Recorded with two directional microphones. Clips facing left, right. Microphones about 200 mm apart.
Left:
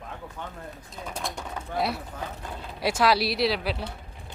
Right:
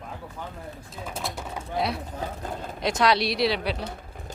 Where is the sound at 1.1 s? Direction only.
5° right (ahead or behind).